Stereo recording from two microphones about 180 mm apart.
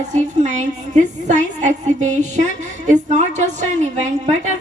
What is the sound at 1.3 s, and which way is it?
A woman's voice, 40° right (ahead or behind).